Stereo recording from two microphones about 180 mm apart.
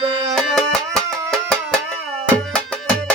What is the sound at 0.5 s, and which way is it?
Music, 5° left (ahead or behind).